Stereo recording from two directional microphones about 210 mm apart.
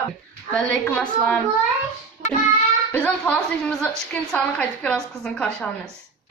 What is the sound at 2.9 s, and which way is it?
A woman's voice, 5° left (ahead or behind).